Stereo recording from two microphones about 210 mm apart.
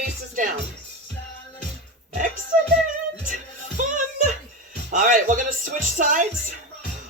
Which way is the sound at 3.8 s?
40° right (ahead or behind).